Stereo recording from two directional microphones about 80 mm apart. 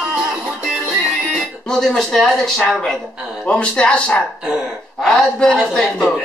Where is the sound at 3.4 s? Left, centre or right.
Centre.